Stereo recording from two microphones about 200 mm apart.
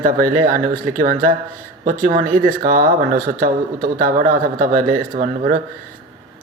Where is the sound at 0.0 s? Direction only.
45° right (ahead or behind).